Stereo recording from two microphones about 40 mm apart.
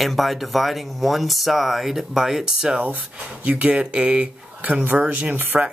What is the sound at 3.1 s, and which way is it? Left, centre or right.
Speech, right.